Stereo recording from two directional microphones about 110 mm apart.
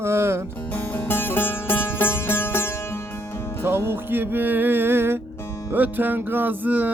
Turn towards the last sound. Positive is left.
turn(degrees=-15)  # may be behind; listen again after turning